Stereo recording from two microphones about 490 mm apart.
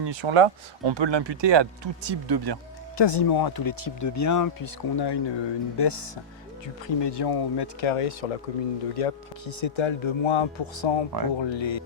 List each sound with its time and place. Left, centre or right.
0.0 s speech: right
3.0 s speech: left